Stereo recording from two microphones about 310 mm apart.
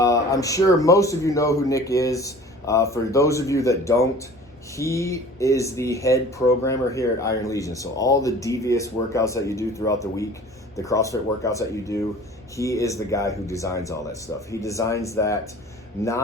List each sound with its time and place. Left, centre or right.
0.0 s speech: centre